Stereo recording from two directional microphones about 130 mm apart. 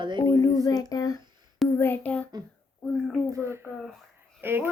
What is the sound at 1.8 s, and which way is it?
A child's voice, 15° left (ahead or behind).